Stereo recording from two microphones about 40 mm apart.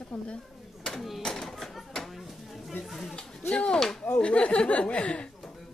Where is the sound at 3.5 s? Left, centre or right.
Left.